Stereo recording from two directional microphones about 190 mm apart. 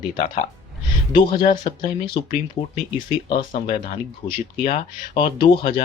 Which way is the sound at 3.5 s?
30° left (ahead or behind).